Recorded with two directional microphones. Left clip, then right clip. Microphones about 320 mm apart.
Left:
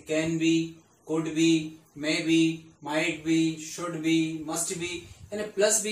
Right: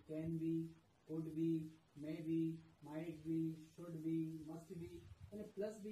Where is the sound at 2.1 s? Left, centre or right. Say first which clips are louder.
Left 19 dB; centre.